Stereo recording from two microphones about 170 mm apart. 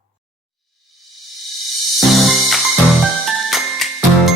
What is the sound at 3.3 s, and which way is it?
Jingle, centre (ahead or behind).